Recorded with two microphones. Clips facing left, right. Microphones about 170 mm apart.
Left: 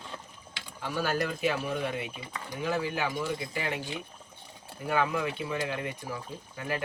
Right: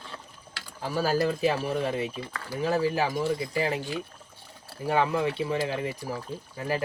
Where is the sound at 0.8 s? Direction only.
35° right (ahead or behind).